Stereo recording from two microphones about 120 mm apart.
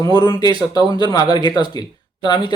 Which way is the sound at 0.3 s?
35° left (ahead or behind).